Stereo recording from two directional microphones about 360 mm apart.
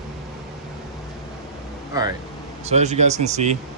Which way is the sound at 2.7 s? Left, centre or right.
Centre.